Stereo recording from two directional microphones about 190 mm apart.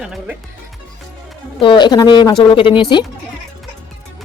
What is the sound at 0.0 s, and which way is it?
Speech, 5° right (ahead or behind).